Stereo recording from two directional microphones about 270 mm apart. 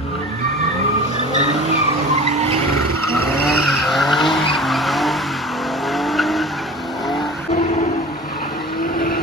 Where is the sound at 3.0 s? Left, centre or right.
Right.